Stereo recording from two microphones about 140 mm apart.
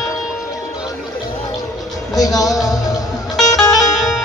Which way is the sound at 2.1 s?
25° left (ahead or behind).